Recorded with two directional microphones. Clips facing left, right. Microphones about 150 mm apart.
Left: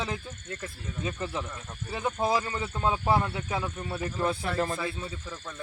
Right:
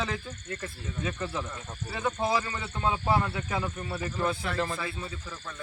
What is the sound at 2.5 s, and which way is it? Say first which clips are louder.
Speech: left 2 dB; 25° left (ahead or behind).